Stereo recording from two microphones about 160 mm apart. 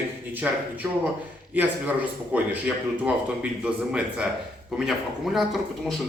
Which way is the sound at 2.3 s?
10° right (ahead or behind).